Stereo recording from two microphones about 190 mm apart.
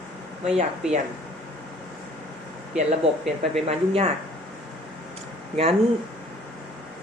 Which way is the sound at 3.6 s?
30° right (ahead or behind).